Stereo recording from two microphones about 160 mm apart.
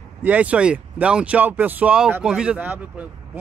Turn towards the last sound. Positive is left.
turn(degrees=-10)  # may be behind; listen again after turning